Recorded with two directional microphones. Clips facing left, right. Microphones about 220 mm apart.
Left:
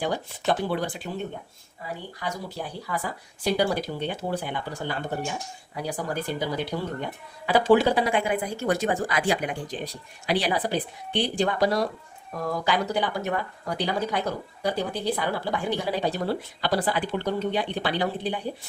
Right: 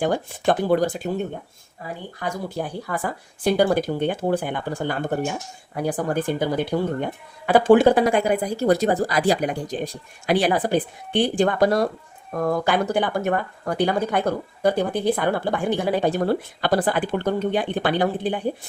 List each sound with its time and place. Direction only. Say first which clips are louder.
0.0 s speech: right 6 dB; 50° right (ahead or behind)
2.1 s speech: right 7 dB; 50° right (ahead or behind)